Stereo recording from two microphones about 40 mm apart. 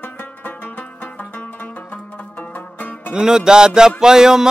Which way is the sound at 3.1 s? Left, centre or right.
Centre.